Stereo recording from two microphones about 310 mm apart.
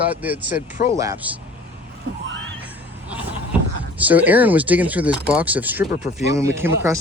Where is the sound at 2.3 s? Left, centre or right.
Right.